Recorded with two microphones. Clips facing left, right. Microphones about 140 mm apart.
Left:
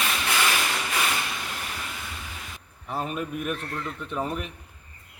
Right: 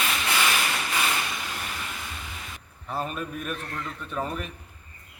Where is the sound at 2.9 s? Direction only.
20° left (ahead or behind).